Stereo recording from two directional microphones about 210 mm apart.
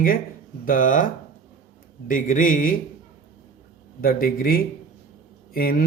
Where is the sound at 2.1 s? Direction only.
40° left (ahead or behind).